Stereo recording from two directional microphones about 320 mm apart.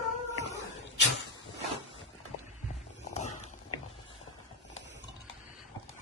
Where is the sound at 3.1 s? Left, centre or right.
Left.